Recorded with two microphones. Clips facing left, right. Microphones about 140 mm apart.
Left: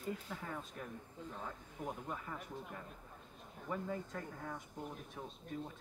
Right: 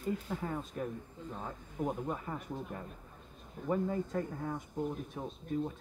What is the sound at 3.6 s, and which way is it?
A woman's voice, 30° right (ahead or behind).